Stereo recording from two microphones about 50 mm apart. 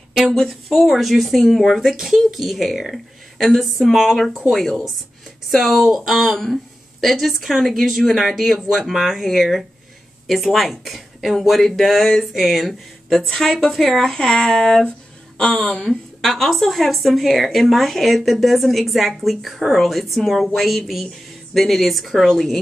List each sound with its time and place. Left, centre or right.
0.3 s speech: centre
14.9 s a sound: left
15.8 s speech: centre